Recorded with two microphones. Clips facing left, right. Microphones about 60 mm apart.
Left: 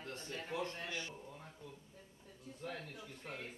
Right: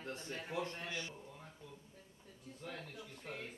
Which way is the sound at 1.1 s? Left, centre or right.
Centre.